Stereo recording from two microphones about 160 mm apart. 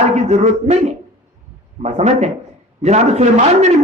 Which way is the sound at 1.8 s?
45° right (ahead or behind).